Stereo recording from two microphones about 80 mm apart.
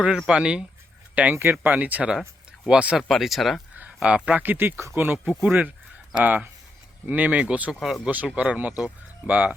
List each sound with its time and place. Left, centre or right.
0.3 s speech: centre
3.0 s speech: centre
4.0 s speech: centre
4.4 s speech: right
7.7 s speech: centre
8.0 s speech: centre